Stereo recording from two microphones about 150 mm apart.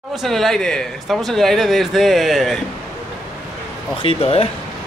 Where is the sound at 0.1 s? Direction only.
Centre (ahead or behind).